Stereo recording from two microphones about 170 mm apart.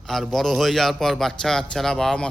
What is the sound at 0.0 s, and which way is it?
A man's voice, centre (ahead or behind).